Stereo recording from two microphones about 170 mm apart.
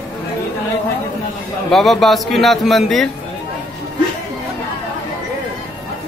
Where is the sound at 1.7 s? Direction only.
Centre (ahead or behind).